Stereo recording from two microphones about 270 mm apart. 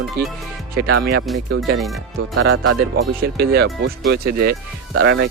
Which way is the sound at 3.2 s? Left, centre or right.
Right.